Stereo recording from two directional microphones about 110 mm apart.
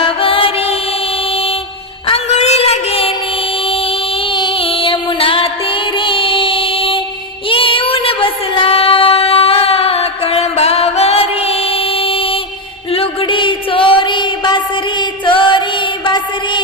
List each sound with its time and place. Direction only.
0.0 s music: 55° left (ahead or behind)
2.0 s a sound: 70° left (ahead or behind)
4.3 s music: 50° left (ahead or behind)
7.5 s child singing: 55° left (ahead or behind)
12.9 s music: 55° left (ahead or behind)